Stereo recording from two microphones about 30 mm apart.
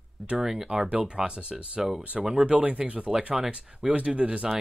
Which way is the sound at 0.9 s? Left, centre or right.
Right.